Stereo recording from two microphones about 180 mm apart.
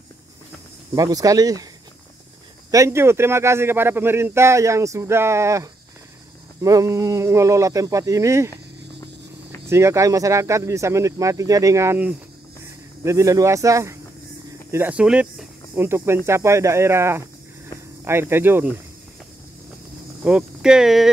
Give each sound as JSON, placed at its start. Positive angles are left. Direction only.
{"t": 0.9, "sound": "speech", "side_deg": -20}
{"t": 2.7, "sound": "speech", "side_deg": -15}
{"t": 9.7, "sound": "speech", "side_deg": -15}
{"t": 20.2, "sound": "speech", "side_deg": -5}